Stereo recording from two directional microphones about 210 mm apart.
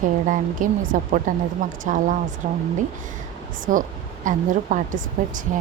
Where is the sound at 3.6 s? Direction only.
40° right (ahead or behind).